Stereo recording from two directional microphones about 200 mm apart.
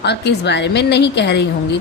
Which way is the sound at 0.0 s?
55° left (ahead or behind).